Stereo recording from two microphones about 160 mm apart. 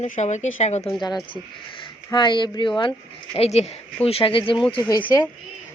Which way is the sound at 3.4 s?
40° left (ahead or behind).